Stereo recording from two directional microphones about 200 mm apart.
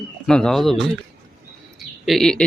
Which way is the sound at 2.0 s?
Centre (ahead or behind).